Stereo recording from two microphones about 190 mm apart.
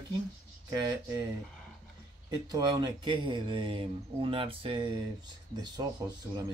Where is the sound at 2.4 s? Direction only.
20° right (ahead or behind).